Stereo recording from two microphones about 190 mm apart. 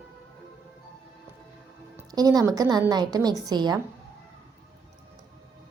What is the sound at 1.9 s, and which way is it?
A woman's voice, 20° right (ahead or behind).